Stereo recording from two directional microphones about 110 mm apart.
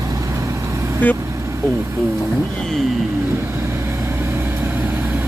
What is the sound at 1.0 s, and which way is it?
Speech, 15° left (ahead or behind).